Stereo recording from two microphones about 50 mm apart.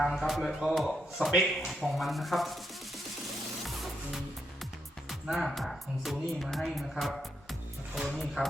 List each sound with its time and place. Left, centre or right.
0.0 s speech: centre
3.7 s music: centre
5.0 s speech: centre
8.4 s speech: right